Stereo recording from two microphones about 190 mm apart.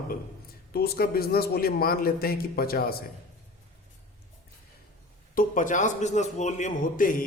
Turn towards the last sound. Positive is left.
turn(degrees=45)  # may be behind; listen again after turning